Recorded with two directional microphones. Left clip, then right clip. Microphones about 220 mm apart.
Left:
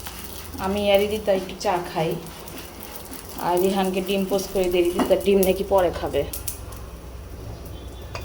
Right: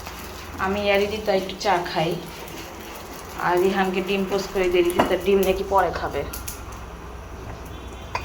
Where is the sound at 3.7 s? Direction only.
30° left (ahead or behind).